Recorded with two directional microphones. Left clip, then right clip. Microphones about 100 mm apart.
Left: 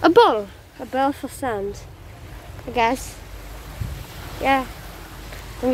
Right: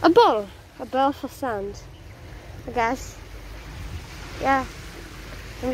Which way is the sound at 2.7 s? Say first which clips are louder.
Left 4 dB; 35° left (ahead or behind).